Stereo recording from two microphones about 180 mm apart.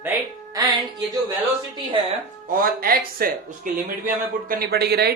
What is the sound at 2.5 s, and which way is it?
Speech, 55° right (ahead or behind).